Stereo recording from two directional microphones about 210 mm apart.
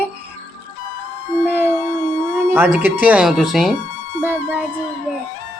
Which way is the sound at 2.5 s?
10° right (ahead or behind).